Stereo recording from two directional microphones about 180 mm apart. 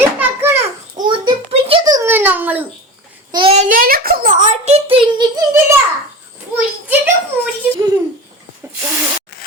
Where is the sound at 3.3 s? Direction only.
25° right (ahead or behind).